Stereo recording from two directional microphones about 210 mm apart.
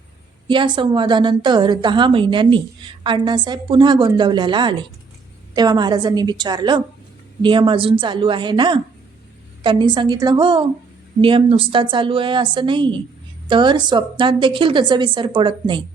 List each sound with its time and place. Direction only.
0.4 s a woman's voice: 20° right (ahead or behind)